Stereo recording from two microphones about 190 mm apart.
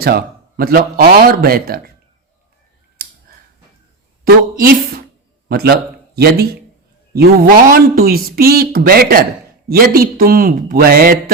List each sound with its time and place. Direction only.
0.0 s speech: 55° right (ahead or behind)
4.2 s a woman's voice: 50° right (ahead or behind)